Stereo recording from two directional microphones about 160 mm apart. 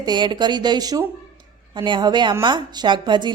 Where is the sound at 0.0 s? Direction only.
25° right (ahead or behind).